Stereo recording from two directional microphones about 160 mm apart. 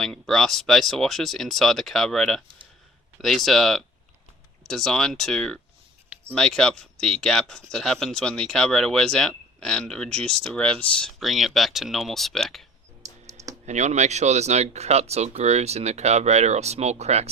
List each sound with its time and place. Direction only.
0.0 s speech: 5° left (ahead or behind)
13.7 s speech: 45° right (ahead or behind)